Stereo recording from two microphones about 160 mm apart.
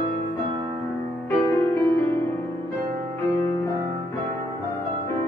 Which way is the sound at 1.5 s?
15° left (ahead or behind).